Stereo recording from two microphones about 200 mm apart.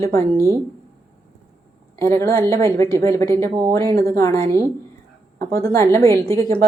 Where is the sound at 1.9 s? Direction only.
15° left (ahead or behind).